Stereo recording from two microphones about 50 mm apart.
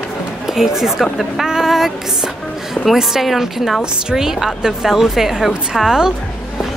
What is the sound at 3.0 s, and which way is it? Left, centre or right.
Speech, centre.